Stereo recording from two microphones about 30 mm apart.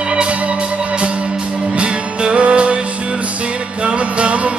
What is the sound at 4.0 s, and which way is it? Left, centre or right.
Music, right.